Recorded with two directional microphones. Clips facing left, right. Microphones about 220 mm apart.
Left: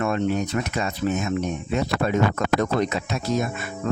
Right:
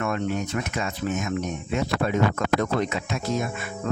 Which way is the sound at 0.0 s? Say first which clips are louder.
Left 3 dB; 30° left (ahead or behind).